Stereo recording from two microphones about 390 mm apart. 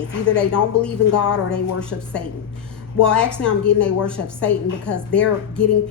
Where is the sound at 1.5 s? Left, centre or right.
Centre.